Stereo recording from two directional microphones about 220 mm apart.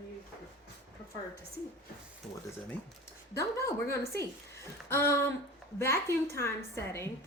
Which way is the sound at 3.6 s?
15° left (ahead or behind).